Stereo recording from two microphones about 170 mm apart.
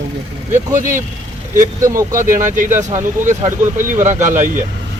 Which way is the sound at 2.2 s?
50° right (ahead or behind).